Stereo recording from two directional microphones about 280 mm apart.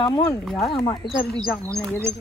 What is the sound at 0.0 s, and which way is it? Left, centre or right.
Speech, centre.